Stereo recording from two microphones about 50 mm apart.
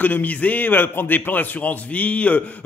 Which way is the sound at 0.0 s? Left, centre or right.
Left.